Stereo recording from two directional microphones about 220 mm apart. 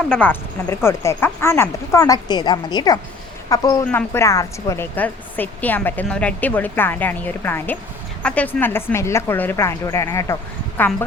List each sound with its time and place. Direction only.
0.1 s a woman's voice: 10° left (ahead or behind)